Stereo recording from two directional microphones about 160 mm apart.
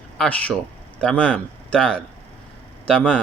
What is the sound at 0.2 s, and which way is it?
Speech, 10° left (ahead or behind).